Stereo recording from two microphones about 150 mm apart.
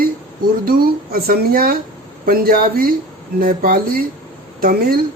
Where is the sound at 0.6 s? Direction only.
85° right.